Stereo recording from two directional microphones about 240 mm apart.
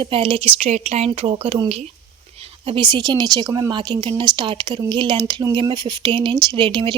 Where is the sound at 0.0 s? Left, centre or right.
Right.